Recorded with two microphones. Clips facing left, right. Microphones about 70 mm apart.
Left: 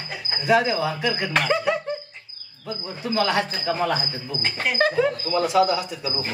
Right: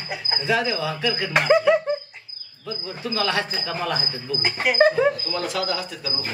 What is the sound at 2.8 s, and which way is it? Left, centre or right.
Cricket, left.